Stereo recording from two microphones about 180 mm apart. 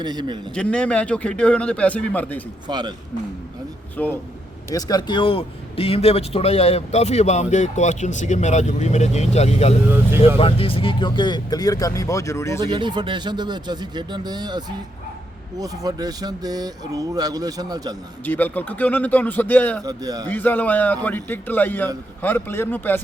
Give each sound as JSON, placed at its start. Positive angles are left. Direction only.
{"t": 0.0, "sound": "speech", "side_deg": -25}
{"t": 0.5, "sound": "a man's voice", "side_deg": 5}
{"t": 2.6, "sound": "speech", "side_deg": -25}
{"t": 3.9, "sound": "a man's voice", "side_deg": 10}
{"t": 4.7, "sound": "a man's voice", "side_deg": 20}
{"t": 12.6, "sound": "speech", "side_deg": -25}
{"t": 18.3, "sound": "a man's voice", "side_deg": 10}
{"t": 19.8, "sound": "speech", "side_deg": -20}
{"t": 20.2, "sound": "a man's voice", "side_deg": 10}